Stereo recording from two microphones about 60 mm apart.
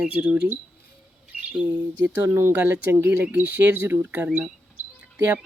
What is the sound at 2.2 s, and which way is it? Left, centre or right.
Speech, right.